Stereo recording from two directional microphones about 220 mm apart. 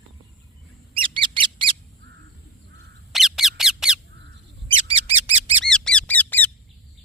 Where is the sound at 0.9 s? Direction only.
25° right (ahead or behind).